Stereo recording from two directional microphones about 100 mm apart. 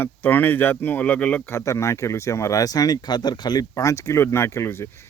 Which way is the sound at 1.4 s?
30° left (ahead or behind).